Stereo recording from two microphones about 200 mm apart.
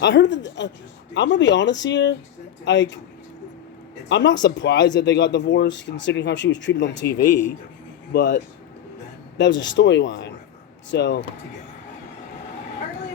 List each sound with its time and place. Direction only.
0.0 s speech: 65° left (ahead or behind)
4.1 s speech: 60° left (ahead or behind)
7.3 s speech: 10° left (ahead or behind)
8.1 s speech: 60° left (ahead or behind)
9.4 s speech: 65° left (ahead or behind)